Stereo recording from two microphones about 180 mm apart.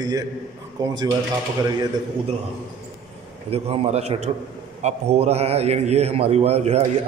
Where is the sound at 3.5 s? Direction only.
35° right (ahead or behind).